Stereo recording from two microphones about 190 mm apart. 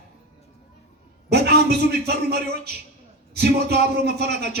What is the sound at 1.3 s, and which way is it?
A man's voice, 60° right (ahead or behind).